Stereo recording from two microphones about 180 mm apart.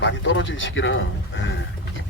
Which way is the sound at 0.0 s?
90° left.